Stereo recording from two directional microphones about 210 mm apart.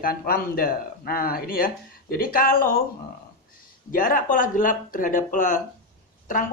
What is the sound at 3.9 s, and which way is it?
Speech, 40° left (ahead or behind).